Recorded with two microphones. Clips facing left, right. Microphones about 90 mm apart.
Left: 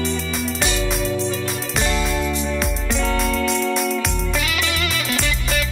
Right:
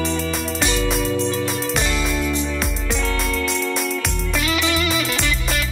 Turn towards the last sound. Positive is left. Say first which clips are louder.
# even
turn(degrees=0)  # may be behind; listen again after turning